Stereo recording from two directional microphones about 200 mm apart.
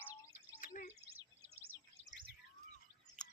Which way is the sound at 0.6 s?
40° left (ahead or behind).